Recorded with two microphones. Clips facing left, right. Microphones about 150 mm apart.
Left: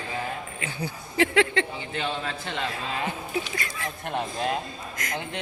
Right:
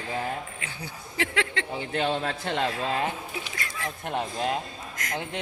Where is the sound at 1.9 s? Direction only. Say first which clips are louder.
Right 3 dB; 55° right (ahead or behind).